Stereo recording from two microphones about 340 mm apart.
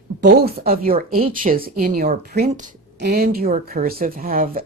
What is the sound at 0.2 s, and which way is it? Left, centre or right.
Speech, right.